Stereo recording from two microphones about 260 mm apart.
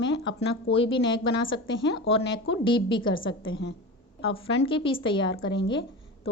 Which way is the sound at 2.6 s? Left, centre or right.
Centre.